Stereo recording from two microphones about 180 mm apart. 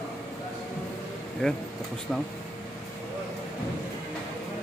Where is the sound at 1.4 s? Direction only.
5° left (ahead or behind).